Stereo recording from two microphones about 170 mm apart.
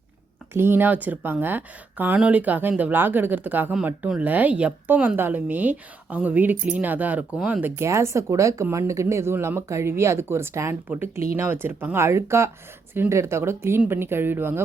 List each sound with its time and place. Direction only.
0.5 s speech: 15° right (ahead or behind)